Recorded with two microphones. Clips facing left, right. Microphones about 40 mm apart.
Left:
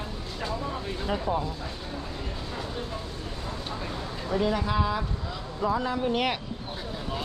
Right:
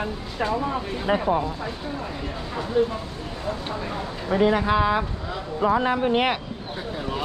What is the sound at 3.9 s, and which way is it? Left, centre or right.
Speech, right.